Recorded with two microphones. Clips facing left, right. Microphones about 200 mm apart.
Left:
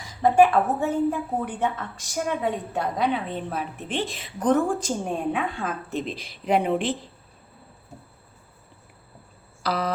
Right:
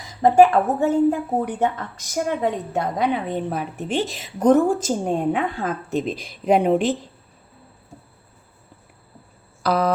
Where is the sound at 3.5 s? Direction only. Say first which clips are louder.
Right 5 dB; 45° right (ahead or behind).